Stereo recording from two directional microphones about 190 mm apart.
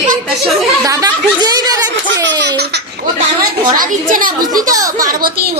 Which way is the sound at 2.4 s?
65° right (ahead or behind).